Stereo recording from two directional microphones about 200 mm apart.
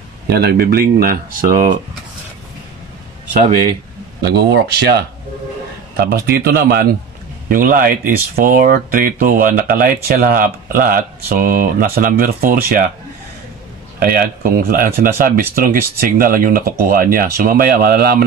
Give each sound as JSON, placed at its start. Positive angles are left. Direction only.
{"t": 0.3, "sound": "speech", "side_deg": -50}
{"t": 3.3, "sound": "a man's voice", "side_deg": -35}
{"t": 4.2, "sound": "speech", "side_deg": -55}
{"t": 13.9, "sound": "speech", "side_deg": -45}